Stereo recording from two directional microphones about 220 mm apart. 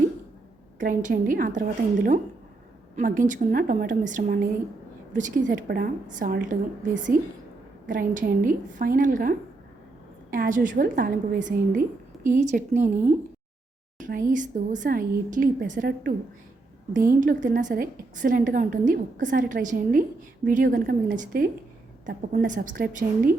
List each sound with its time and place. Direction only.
0.8 s a woman's voice: 40° right (ahead or behind)
10.3 s a woman's voice: 40° right (ahead or behind)
14.0 s a woman's voice: 40° right (ahead or behind)